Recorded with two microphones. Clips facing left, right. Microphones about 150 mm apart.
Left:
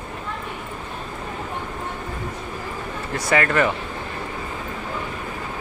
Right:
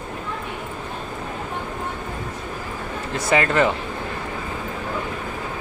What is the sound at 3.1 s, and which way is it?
Speech, 25° right (ahead or behind).